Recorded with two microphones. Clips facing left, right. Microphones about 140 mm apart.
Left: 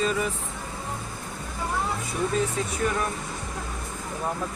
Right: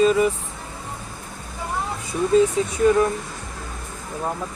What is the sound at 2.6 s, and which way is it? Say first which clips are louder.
Speech: right 7 dB; 20° right (ahead or behind).